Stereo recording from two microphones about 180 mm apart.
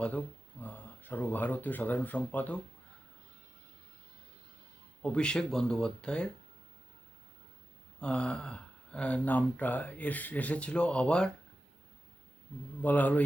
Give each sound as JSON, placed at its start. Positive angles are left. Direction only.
{"t": 0.0, "sound": "speech", "side_deg": 10}
{"t": 5.0, "sound": "speech", "side_deg": 5}
{"t": 7.9, "sound": "speech", "side_deg": 5}
{"t": 12.8, "sound": "speech", "side_deg": 10}